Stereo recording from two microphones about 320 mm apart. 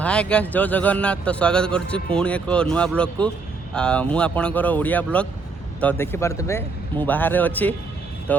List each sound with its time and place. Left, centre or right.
0.0 s speech: centre